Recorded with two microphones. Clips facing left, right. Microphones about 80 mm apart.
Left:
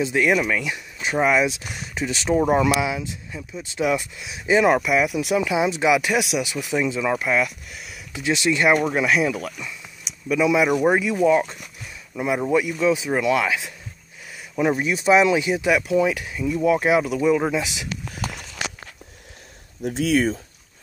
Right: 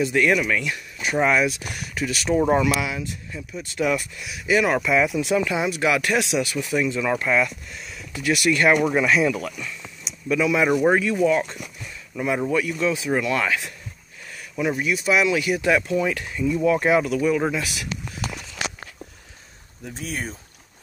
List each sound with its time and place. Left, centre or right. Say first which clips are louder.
0.0 s speech: even; centre
2.3 s speech: even; centre
2.8 s speech: left 3 dB; centre
4.8 s speech: even; centre
8.1 s speech: even; left
8.7 s speech: right 1 dB; centre
10.0 s a sound: even; centre
10.4 s speech: left 1 dB; centre
14.6 s speech: left 2 dB; left
15.7 s speech: left 3 dB; centre
19.8 s speech: left 11 dB; left